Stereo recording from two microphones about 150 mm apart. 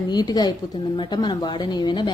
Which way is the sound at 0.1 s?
25° left (ahead or behind).